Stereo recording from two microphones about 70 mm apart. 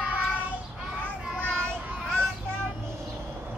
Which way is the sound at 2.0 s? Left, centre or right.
Centre.